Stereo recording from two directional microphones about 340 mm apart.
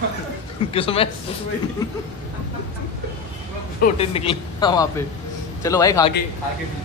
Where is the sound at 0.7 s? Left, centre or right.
Centre.